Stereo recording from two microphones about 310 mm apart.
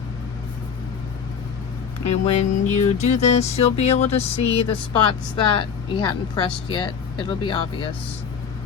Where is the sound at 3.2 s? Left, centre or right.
Left.